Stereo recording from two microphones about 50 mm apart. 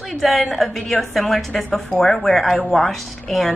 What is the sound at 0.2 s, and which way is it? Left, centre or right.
A woman's voice, centre.